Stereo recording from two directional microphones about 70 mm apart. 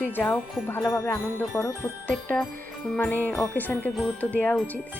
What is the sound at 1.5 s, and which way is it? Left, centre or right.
Jingle bell, left.